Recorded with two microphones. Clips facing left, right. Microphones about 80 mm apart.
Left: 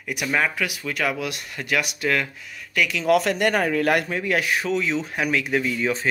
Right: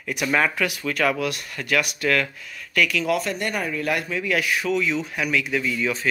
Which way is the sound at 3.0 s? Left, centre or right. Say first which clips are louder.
Left 5 dB; left.